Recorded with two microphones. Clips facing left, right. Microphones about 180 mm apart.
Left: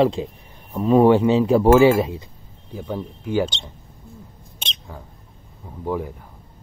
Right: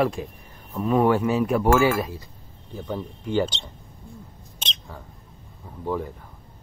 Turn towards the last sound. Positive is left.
turn(degrees=10)  # may be behind; listen again after turning